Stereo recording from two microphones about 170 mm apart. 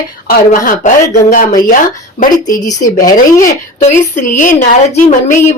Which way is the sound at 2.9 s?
55° left (ahead or behind).